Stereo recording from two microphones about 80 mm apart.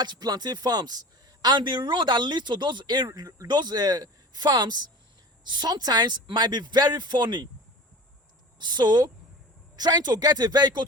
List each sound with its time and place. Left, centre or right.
0.0 s speech: right
3.2 s speech: right
8.5 s speech: right